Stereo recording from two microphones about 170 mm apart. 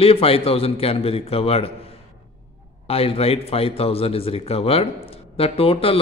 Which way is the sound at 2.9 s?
35° left (ahead or behind).